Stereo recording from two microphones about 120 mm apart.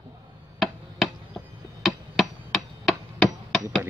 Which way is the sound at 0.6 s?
Centre (ahead or behind).